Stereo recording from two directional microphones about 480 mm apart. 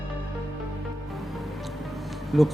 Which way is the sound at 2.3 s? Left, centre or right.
Centre.